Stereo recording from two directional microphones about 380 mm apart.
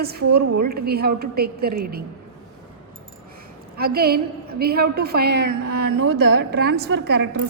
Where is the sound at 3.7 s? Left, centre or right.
Right.